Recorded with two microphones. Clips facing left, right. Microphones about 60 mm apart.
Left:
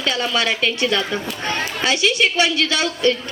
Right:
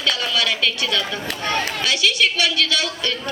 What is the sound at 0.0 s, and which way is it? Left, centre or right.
A woman's voice, left.